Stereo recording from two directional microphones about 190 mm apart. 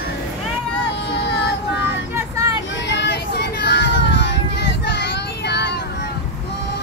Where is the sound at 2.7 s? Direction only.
70° left (ahead or behind).